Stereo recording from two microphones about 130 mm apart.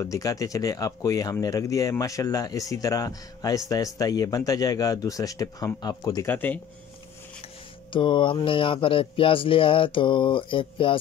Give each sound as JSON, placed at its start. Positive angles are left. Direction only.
{"t": 0.0, "sound": "speech", "side_deg": 25}
{"t": 6.2, "sound": "speech", "side_deg": 15}
{"t": 7.9, "sound": "speech", "side_deg": 40}